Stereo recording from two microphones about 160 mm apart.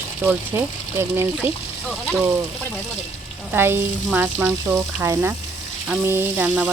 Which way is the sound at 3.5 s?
15° right (ahead or behind).